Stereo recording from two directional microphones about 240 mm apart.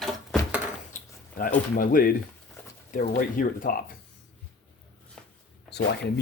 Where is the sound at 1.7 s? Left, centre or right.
Left.